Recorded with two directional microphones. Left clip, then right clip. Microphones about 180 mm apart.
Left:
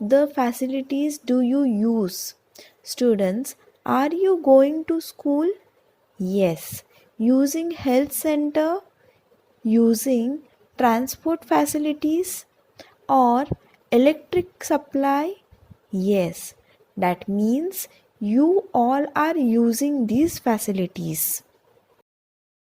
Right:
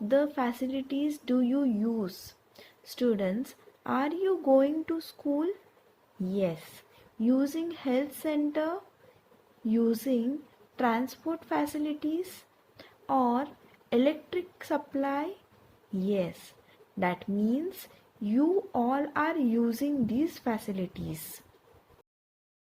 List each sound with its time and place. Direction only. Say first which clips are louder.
0.1 s a woman's voice: left 8 dB; 35° left (ahead or behind)
12.7 s a sound: left 10 dB; 40° left (ahead or behind)
13.9 s speech: left 9 dB; 40° left (ahead or behind)